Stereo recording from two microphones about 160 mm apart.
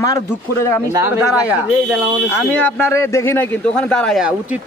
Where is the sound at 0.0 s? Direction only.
20° left (ahead or behind).